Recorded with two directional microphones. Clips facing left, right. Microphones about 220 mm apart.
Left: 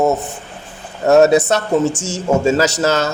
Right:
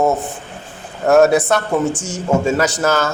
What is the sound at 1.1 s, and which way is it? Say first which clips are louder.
A man's voice: left 1 dB; 20° left (ahead or behind).